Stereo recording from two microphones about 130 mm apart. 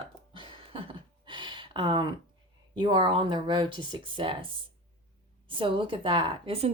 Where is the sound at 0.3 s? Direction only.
40° right (ahead or behind).